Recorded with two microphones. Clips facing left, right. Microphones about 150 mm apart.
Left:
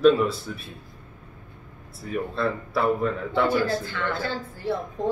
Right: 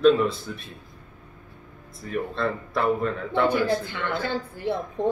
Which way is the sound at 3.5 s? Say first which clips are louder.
Right 1 dB; 20° right (ahead or behind).